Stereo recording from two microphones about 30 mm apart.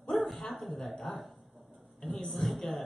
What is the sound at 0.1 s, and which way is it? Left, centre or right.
Bow-wow, centre.